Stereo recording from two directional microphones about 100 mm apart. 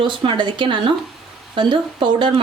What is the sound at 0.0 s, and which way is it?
Speech, 55° right (ahead or behind).